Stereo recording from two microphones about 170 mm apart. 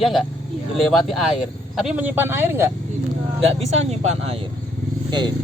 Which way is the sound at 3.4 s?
40° right (ahead or behind).